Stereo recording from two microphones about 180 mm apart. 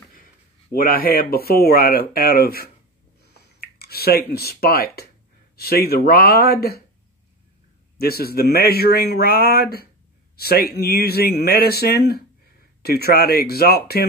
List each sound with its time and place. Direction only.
0.1 s speech: 55° left (ahead or behind)
8.0 s speech: 60° left (ahead or behind)